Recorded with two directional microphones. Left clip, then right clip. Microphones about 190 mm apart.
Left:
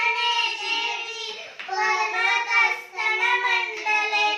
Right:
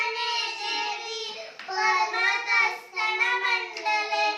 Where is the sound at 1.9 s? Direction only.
Centre (ahead or behind).